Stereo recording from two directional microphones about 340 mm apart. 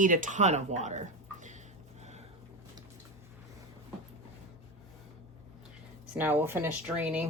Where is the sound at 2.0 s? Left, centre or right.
Centre.